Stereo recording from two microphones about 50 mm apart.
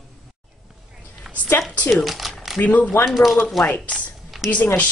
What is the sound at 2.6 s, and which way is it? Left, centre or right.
Speech, left.